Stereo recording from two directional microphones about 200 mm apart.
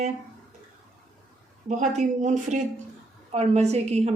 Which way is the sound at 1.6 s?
35° right (ahead or behind).